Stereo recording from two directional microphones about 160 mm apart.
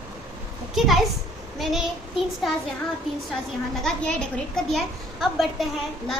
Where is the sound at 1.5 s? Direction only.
Centre (ahead or behind).